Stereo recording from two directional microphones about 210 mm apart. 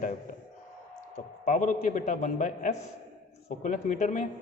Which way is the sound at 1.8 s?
35° left (ahead or behind).